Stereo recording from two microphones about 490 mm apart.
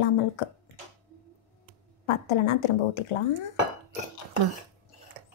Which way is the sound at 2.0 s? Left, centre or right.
Left.